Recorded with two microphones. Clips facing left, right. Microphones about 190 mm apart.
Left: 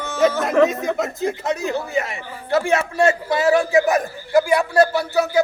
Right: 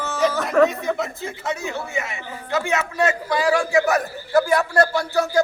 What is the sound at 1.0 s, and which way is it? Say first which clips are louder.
A man's voice: left 5 dB; 40° left (ahead or behind).